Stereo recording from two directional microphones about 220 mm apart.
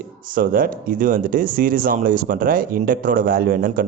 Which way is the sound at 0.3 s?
40° right (ahead or behind).